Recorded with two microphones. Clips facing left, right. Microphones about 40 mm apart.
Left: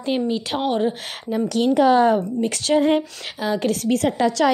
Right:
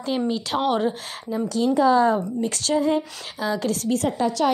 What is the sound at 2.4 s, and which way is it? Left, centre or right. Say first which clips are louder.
Speech: left 2 dB; left.